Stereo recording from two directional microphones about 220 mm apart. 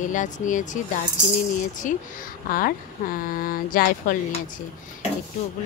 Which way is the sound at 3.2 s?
40° left (ahead or behind).